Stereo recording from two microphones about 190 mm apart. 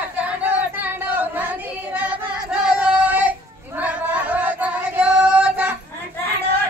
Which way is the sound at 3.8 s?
10° right (ahead or behind).